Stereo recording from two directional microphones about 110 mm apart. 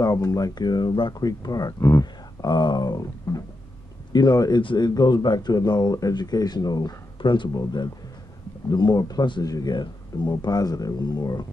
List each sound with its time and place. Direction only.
0.0 s speech: 30° left (ahead or behind)
2.5 s speech: 45° left (ahead or behind)